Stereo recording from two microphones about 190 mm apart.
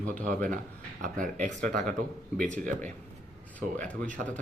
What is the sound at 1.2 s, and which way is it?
Speech, 40° right (ahead or behind).